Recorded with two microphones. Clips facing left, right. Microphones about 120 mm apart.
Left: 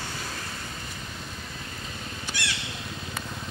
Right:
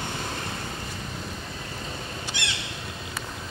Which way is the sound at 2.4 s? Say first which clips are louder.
Left 2 dB; 20° right (ahead or behind).